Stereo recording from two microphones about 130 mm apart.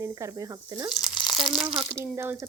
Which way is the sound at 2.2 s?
20° right (ahead or behind).